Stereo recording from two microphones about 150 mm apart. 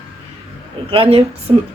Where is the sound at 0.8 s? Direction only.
40° right (ahead or behind).